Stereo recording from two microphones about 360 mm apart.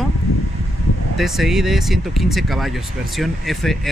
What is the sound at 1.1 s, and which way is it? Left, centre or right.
Speech, centre.